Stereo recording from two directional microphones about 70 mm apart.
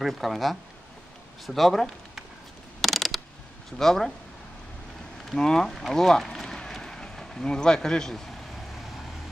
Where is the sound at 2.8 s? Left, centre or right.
Centre.